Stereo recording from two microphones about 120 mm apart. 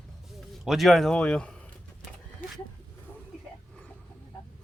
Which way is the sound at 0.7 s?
Centre (ahead or behind).